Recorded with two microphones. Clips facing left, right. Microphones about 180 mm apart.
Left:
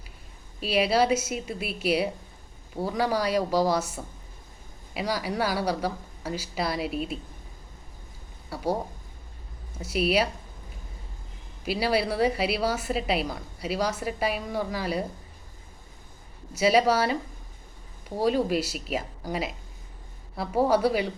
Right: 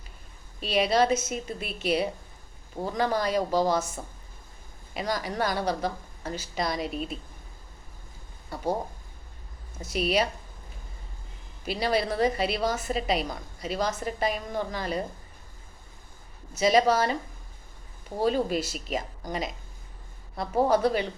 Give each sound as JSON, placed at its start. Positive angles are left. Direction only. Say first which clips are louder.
{"t": 0.6, "sound": "a woman's voice", "louder": "even", "side_deg": 5}
{"t": 4.9, "sound": "a woman's voice", "louder": "left 1 dB", "side_deg": 5}
{"t": 8.4, "sound": "a woman's voice", "louder": "left 1 dB", "side_deg": 5}
{"t": 11.6, "sound": "a woman's voice", "louder": "left 1 dB", "side_deg": 5}
{"t": 16.6, "sound": "a woman's voice", "louder": "even", "side_deg": 5}
{"t": 18.2, "sound": "a woman's voice", "louder": "left 1 dB", "side_deg": 5}